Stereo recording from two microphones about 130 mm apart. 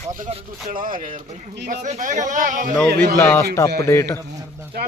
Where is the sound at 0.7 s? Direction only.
90° right.